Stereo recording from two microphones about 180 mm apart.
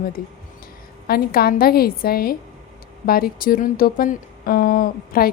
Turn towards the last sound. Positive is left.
turn(degrees=55)  # may be behind; listen again after turning